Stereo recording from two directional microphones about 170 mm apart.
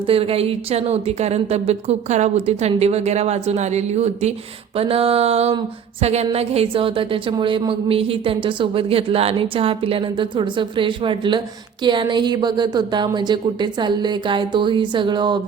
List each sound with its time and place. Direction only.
0.1 s a woman's voice: 35° right (ahead or behind)